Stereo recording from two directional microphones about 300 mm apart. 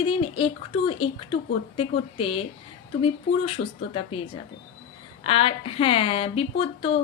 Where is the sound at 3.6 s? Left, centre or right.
Left.